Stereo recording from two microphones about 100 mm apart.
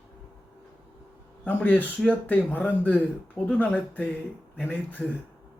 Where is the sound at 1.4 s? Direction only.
15° left (ahead or behind).